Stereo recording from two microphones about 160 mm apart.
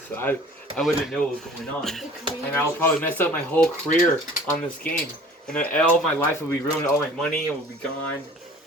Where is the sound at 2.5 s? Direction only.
10° left (ahead or behind).